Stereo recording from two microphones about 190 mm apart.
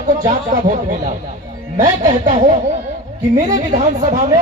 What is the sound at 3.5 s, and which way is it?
Speech, 35° right (ahead or behind).